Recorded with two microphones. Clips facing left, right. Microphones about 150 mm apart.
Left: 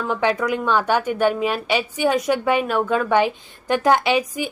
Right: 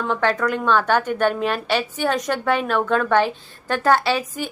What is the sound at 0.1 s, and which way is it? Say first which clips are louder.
A woman's voice: left 1 dB; 10° left (ahead or behind).